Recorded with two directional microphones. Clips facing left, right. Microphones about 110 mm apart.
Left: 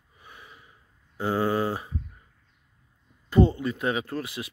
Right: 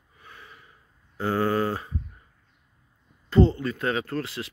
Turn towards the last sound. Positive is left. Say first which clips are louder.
# right 2 dB
turn(degrees=15)  # may be behind; listen again after turning